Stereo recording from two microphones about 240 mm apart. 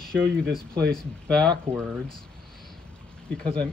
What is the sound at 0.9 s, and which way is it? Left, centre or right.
Speech, centre.